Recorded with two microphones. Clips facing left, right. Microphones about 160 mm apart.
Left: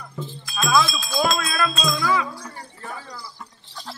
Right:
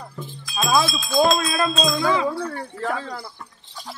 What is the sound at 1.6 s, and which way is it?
Speech, 25° right (ahead or behind).